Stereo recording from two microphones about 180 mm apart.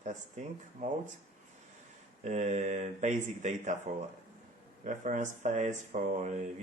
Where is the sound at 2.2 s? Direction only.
40° right (ahead or behind).